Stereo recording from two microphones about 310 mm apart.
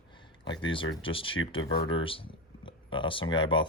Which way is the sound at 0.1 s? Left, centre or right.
Centre.